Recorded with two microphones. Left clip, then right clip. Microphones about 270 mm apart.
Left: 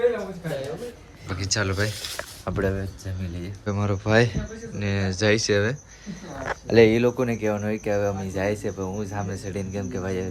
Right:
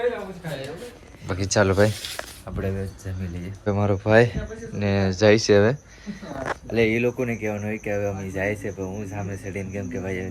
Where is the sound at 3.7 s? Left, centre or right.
Centre.